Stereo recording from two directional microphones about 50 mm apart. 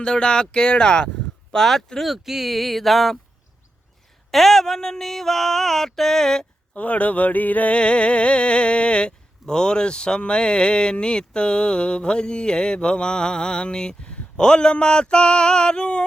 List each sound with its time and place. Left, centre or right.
0.0 s music: centre
1.5 s speech: centre
4.3 s a sound: centre
6.7 s music: left